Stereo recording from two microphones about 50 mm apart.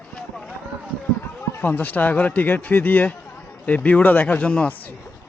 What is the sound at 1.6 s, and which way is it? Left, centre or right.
Speech, left.